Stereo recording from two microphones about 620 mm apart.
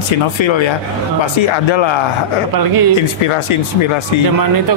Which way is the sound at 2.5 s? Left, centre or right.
Right.